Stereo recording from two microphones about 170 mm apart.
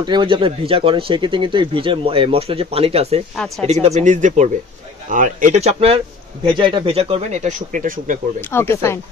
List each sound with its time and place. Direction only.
0.0 s speech: 25° right (ahead or behind)
3.3 s speech: centre (ahead or behind)
3.8 s speech: 45° right (ahead or behind)
8.4 s speech: 15° left (ahead or behind)